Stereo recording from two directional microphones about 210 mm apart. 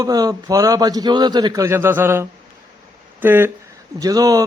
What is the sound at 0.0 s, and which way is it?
A man's voice, 15° right (ahead or behind).